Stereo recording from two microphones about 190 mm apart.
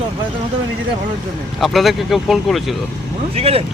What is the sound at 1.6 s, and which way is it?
Speech, centre (ahead or behind).